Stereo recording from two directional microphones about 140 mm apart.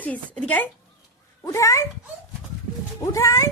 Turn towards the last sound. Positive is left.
turn(degrees=20)  # may be behind; listen again after turning